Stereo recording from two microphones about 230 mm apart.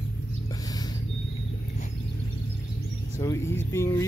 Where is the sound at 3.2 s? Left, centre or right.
Centre.